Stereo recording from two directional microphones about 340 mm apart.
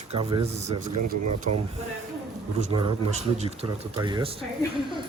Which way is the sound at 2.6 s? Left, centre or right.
Centre.